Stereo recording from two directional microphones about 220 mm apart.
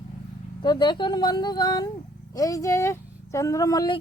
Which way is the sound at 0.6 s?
20° left (ahead or behind).